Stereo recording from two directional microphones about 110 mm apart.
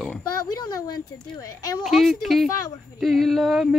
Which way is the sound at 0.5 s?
35° left (ahead or behind).